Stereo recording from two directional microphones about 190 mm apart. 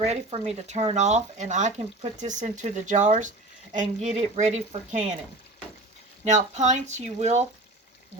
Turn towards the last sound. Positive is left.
turn(degrees=-35)  # may be behind; listen again after turning